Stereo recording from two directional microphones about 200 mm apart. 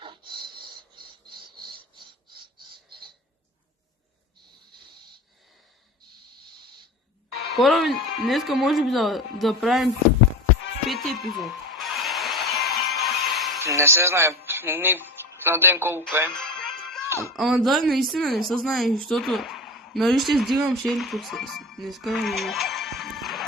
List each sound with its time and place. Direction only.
0.0 s filing: 25° right (ahead or behind)
2.0 s a sound: 25° right (ahead or behind)
7.4 s speech: centre (ahead or behind)
10.8 s music: centre (ahead or behind)
13.7 s speech: 15° right (ahead or behind)
16.3 s music: centre (ahead or behind)
17.1 s speech: 15° right (ahead or behind)
17.3 s a woman's voice: centre (ahead or behind)